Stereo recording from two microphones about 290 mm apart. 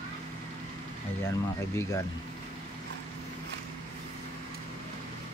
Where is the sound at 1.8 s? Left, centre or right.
Centre.